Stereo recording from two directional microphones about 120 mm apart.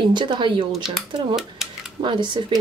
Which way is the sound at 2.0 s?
40° right (ahead or behind).